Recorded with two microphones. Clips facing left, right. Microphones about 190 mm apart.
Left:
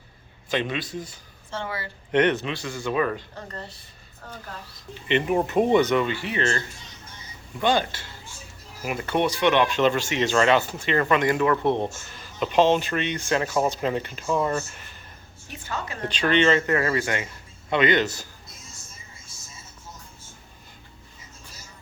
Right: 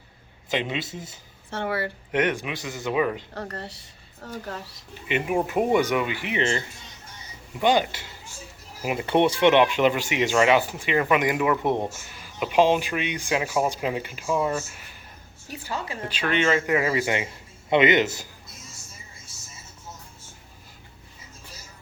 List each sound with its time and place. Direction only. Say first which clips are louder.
0.5 s speech: left 1 dB; 20° right (ahead or behind)
1.5 s speech: right 5 dB; 60° right (ahead or behind)
2.1 s speech: left 4 dB; 10° right (ahead or behind)
3.3 s speech: right 3 dB; 70° right (ahead or behind)
5.0 s speech: left 2 dB; 10° right (ahead or behind)
7.6 s speech: right 2 dB; 15° right (ahead or behind)
9.7 s speech: even; 15° right (ahead or behind)
15.4 s a woman's voice: right 1 dB; 35° right (ahead or behind)
16.0 s speech: left 5 dB; 5° right (ahead or behind)